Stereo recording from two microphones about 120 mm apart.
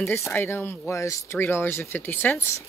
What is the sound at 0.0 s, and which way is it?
Speech, 20° left (ahead or behind).